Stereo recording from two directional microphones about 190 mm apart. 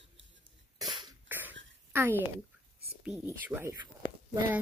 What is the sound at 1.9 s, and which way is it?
Speech, 15° right (ahead or behind).